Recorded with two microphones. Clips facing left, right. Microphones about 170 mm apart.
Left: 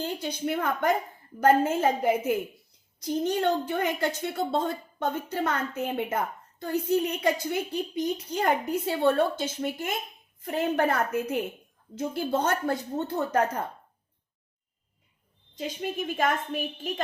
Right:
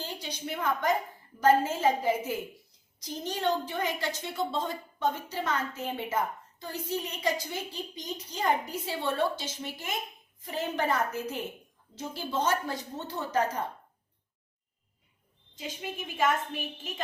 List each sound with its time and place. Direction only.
0.0 s a woman's voice: 55° left (ahead or behind)
15.5 s a woman's voice: 45° left (ahead or behind)